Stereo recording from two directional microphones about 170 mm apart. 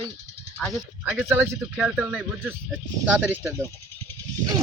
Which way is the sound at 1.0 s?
10° right (ahead or behind).